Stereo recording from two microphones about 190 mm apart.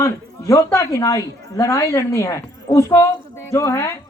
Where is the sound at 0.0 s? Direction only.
15° left (ahead or behind).